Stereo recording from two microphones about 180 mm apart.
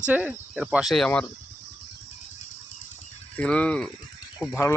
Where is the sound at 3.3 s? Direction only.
5° left (ahead or behind).